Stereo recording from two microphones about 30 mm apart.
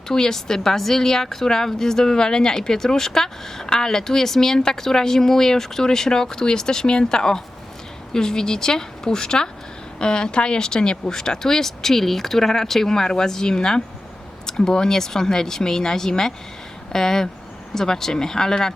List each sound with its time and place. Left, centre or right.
0.1 s speech: centre